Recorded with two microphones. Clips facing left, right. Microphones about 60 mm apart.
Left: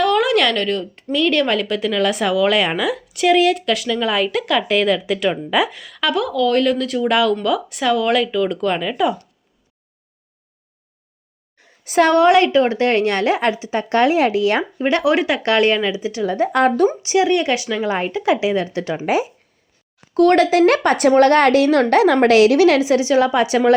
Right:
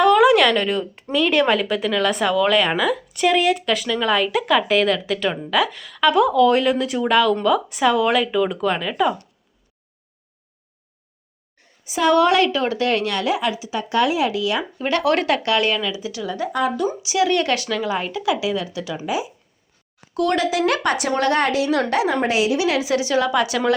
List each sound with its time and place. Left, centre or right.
0.0 s a sound: centre
1.1 s a woman's voice: centre
7.1 s a woman's voice: centre
11.9 s a woman's voice: left
12.1 s speech: left
14.8 s a woman's voice: left
15.1 s speech: centre
15.4 s speech: left
16.5 s a woman's voice: left
17.2 s a woman's voice: left
17.8 s a woman's voice: left
22.8 s a woman's voice: left